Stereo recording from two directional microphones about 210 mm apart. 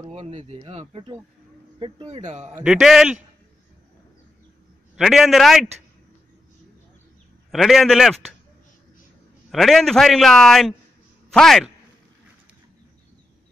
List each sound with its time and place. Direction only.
0.1 s speech: 35° right (ahead or behind)
2.6 s a man's voice: centre (ahead or behind)
4.9 s a man's voice: centre (ahead or behind)
7.5 s a man's voice: centre (ahead or behind)
9.5 s a man's voice: centre (ahead or behind)